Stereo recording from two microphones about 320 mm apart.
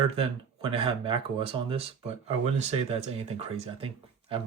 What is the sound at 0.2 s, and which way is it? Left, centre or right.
Speech, centre.